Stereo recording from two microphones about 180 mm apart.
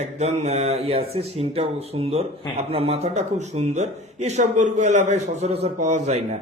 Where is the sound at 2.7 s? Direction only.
35° right (ahead or behind).